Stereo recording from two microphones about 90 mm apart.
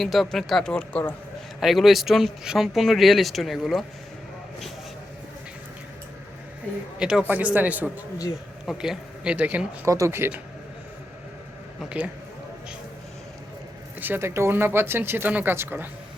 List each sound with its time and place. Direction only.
0.0 s speech: centre (ahead or behind)
1.6 s speech: centre (ahead or behind)
7.0 s speech: 10° right (ahead or behind)
8.6 s speech: 5° right (ahead or behind)
9.8 s speech: 35° right (ahead or behind)
11.8 s speech: 10° right (ahead or behind)
14.0 s speech: 25° right (ahead or behind)